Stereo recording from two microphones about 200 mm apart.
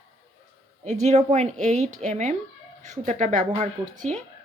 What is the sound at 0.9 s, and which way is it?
Speech, 35° right (ahead or behind).